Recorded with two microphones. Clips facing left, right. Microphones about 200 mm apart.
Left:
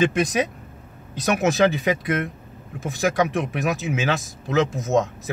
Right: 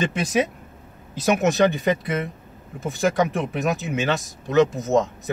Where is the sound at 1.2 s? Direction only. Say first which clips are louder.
Right 1 dB; centre (ahead or behind).